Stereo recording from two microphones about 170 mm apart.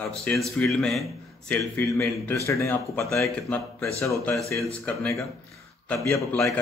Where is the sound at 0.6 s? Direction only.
5° left (ahead or behind).